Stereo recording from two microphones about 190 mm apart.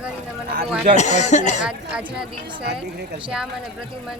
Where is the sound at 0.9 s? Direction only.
40° left (ahead or behind).